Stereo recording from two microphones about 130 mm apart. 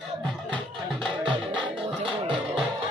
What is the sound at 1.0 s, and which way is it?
Music, 40° right (ahead or behind).